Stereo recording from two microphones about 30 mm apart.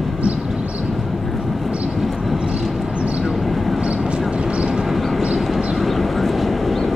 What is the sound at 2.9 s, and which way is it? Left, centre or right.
Vehicle, right.